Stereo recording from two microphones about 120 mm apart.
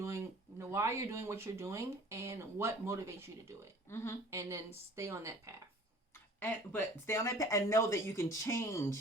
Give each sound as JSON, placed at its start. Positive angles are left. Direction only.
{"t": 0.0, "sound": "speech", "side_deg": -25}
{"t": 3.8, "sound": "speech", "side_deg": 20}
{"t": 4.3, "sound": "speech", "side_deg": -25}
{"t": 6.4, "sound": "speech", "side_deg": 20}